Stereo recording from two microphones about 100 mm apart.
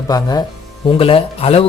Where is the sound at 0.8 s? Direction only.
65° left (ahead or behind); by 1.6 s 85° left.